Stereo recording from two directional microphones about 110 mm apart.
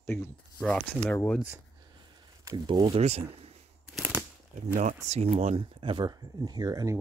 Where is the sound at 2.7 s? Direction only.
45° right (ahead or behind).